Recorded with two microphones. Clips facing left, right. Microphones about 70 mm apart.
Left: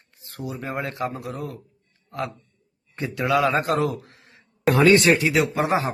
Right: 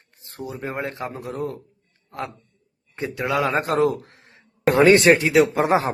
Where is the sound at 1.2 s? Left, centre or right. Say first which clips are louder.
Right 4 dB; right.